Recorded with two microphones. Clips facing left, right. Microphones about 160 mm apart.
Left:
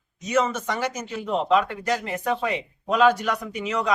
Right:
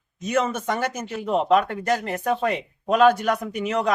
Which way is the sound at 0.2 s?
55° right (ahead or behind).